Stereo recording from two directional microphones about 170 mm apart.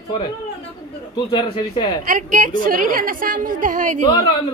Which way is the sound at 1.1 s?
25° left (ahead or behind).